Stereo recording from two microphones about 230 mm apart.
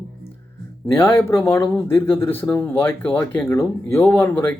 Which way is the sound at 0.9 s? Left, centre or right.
Centre.